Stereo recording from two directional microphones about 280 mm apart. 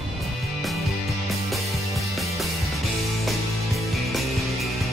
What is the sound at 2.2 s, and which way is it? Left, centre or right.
Music, centre.